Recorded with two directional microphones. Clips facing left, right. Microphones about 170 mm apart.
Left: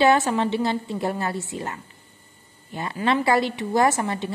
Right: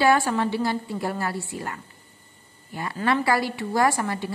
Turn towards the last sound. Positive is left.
turn(degrees=20)  # may be behind; listen again after turning